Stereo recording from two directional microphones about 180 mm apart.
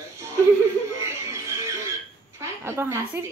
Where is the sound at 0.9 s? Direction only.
15° right (ahead or behind).